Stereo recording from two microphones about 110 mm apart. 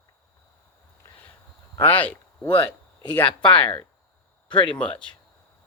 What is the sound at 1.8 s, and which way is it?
Speech, 15° left (ahead or behind).